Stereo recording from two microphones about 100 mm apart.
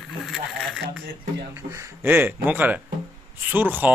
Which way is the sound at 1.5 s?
30° right (ahead or behind).